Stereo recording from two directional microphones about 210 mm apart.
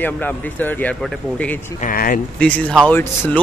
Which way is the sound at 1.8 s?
40° left (ahead or behind).